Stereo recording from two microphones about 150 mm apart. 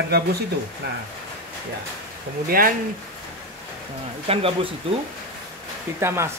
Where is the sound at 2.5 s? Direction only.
75° right (ahead or behind).